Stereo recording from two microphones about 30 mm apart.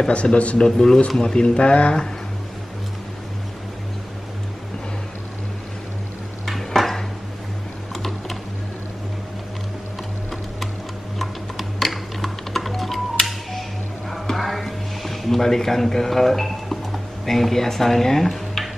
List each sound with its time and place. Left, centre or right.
0.1 s speech: left
0.6 s speech: centre
1.2 s speech: left
6.4 s dishes: centre
11.1 s music: centre